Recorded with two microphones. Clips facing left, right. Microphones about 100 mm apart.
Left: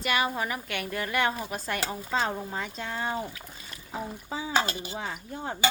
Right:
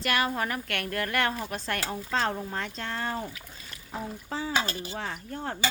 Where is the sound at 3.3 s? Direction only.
10° left (ahead or behind).